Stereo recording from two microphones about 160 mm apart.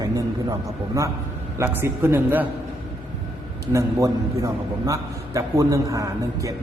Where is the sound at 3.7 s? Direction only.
20° right (ahead or behind).